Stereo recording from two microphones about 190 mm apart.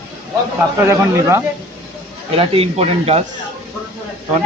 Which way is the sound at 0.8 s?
15° right (ahead or behind).